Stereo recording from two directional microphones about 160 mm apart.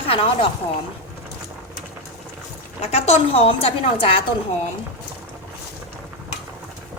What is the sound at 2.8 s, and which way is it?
Speech, 40° left (ahead or behind).